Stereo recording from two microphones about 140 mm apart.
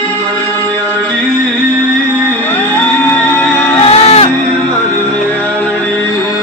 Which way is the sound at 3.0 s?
15° left (ahead or behind).